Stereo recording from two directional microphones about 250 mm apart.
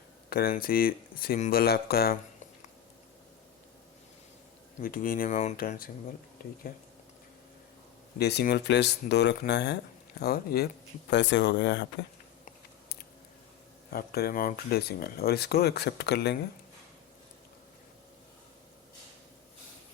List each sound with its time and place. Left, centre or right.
0.3 s speech: left
4.8 s speech: left
8.2 s speech: left
13.9 s speech: left